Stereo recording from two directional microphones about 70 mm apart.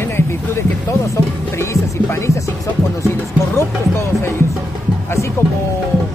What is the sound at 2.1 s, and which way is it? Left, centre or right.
Speech, left.